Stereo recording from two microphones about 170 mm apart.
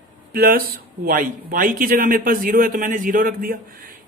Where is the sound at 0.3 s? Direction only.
60° right (ahead or behind).